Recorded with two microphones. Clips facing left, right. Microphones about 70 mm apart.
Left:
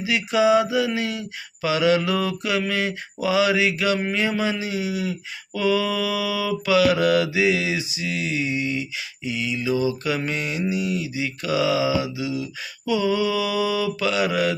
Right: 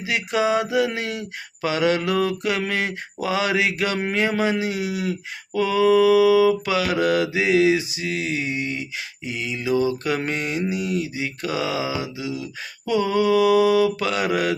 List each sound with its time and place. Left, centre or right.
0.0 s mantra: right
5.5 s mantra: right